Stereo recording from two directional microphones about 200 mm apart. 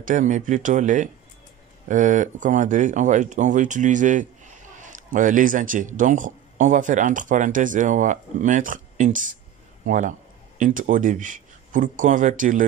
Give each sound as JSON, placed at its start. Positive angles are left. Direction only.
{"t": 0.0, "sound": "speech", "side_deg": -40}